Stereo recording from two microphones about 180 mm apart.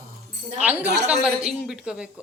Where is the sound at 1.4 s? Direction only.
5° right (ahead or behind).